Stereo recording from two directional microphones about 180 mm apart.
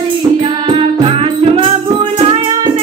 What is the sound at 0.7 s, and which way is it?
Music, 30° right (ahead or behind).